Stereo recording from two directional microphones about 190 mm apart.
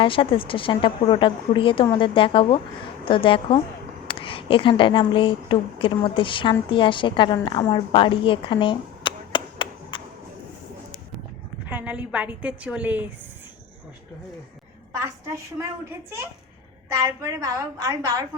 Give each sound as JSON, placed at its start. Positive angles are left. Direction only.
{"t": 0.0, "sound": "a woman's voice", "side_deg": 25}
{"t": 11.6, "sound": "a woman's voice", "side_deg": -10}
{"t": 15.5, "sound": "a woman's voice", "side_deg": -15}
{"t": 17.2, "sound": "a woman's voice", "side_deg": -15}